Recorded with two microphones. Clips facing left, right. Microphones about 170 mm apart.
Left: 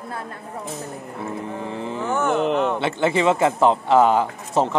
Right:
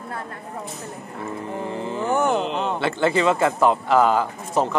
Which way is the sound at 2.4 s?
60° left (ahead or behind).